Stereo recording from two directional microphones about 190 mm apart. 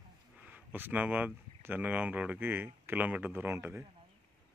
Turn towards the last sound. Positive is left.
turn(degrees=-10)  # may be behind; listen again after turning